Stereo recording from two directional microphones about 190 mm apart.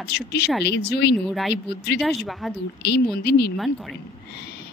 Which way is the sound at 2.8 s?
60° left (ahead or behind).